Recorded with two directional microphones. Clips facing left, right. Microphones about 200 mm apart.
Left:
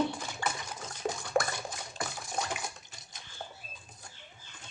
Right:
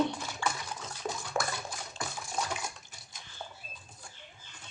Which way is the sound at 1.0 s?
35° left (ahead or behind).